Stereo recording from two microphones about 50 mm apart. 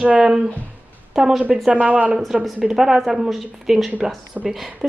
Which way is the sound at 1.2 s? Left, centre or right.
Centre.